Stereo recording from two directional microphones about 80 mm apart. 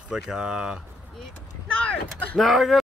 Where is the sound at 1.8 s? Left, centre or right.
Centre.